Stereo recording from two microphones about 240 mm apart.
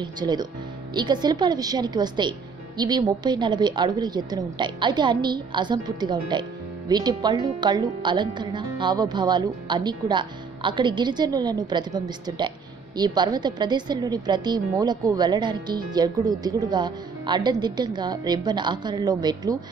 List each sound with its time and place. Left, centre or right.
0.0 s a woman's voice: centre